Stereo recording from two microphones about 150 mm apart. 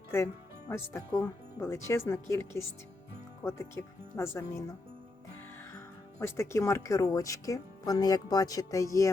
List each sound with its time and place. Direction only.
0.7 s speech: 15° left (ahead or behind)
5.7 s speech: 20° left (ahead or behind)